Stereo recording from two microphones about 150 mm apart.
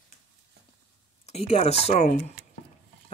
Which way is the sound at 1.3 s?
45° left (ahead or behind).